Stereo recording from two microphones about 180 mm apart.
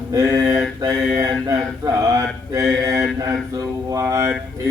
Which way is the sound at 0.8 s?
20° right (ahead or behind).